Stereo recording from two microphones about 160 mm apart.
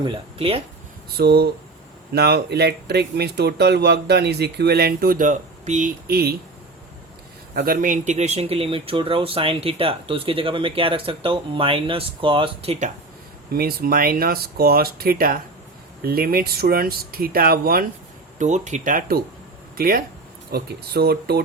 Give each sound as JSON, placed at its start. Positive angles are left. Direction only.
{"t": 0.0, "sound": "speech", "side_deg": -35}
{"t": 1.1, "sound": "speech", "side_deg": -80}
{"t": 6.1, "sound": "speech", "side_deg": -75}
{"t": 7.5, "sound": "speech", "side_deg": -65}
{"t": 13.5, "sound": "speech", "side_deg": -75}
{"t": 18.3, "sound": "speech", "side_deg": -45}
{"t": 20.5, "sound": "speech", "side_deg": -90}